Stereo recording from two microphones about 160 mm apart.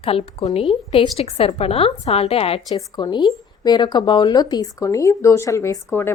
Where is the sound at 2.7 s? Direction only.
25° left (ahead or behind).